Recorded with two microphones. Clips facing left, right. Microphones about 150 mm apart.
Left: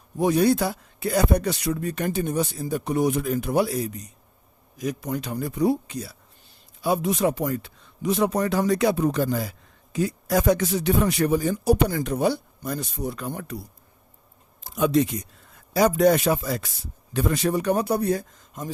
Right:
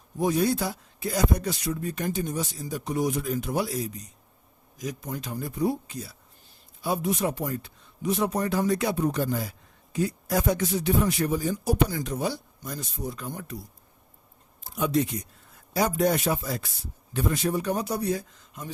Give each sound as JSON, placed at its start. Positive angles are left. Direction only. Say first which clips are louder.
{"t": 0.2, "sound": "a man's voice", "louder": "left 4 dB", "side_deg": 70}
{"t": 6.8, "sound": "speech", "louder": "left 4 dB", "side_deg": 90}
{"t": 14.6, "sound": "speech", "louder": "left 4 dB", "side_deg": 90}